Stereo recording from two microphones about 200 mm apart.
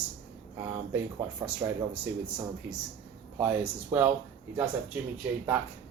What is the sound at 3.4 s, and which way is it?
Speech, 10° right (ahead or behind).